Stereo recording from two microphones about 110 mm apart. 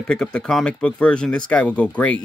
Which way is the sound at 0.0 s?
5° left (ahead or behind).